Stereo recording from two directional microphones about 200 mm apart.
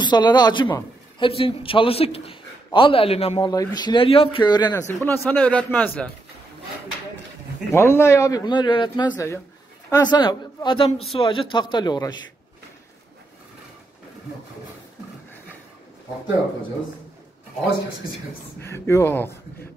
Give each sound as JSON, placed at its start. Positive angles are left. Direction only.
{"t": 0.0, "sound": "a man's voice", "side_deg": 20}
{"t": 7.7, "sound": "a man's voice", "side_deg": 10}
{"t": 18.6, "sound": "a man's voice", "side_deg": 15}